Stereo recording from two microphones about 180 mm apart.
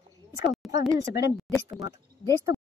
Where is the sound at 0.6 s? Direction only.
Centre (ahead or behind).